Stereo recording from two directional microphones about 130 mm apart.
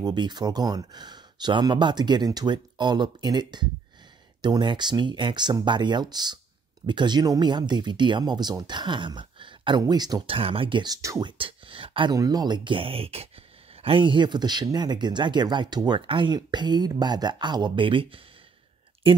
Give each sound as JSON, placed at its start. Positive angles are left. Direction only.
{"t": 0.0, "sound": "speech", "side_deg": -35}
{"t": 10.3, "sound": "speech", "side_deg": -45}
{"t": 11.0, "sound": "speech", "side_deg": -25}
{"t": 11.2, "sound": "speech", "side_deg": -40}
{"t": 12.2, "sound": "speech", "side_deg": -30}